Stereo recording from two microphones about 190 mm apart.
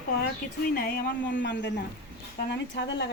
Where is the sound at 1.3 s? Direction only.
70° left (ahead or behind).